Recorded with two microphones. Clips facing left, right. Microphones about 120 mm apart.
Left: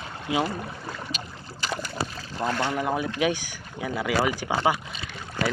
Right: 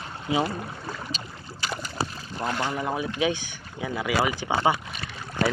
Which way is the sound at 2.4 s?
Centre (ahead or behind).